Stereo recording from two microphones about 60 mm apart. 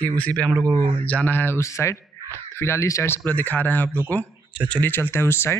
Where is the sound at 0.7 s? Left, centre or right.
Left.